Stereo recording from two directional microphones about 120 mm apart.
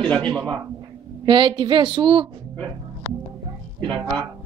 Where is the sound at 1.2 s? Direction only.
40° right (ahead or behind).